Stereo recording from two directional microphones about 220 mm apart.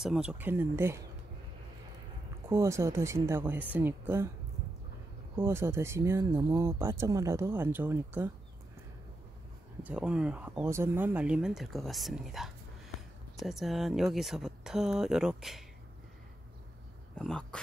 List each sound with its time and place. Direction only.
0.0 s speech: 5° right (ahead or behind)
2.5 s speech: 10° right (ahead or behind)
5.4 s speech: 10° right (ahead or behind)
9.8 s speech: 5° right (ahead or behind)
17.1 s speech: 5° left (ahead or behind)